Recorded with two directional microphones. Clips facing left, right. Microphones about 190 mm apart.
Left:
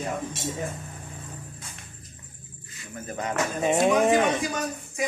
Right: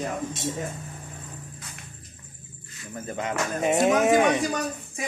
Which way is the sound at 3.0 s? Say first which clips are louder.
Right 1 dB; 25° right (ahead or behind).